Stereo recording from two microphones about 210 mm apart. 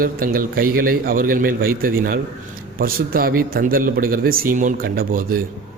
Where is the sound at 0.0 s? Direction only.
45° right (ahead or behind).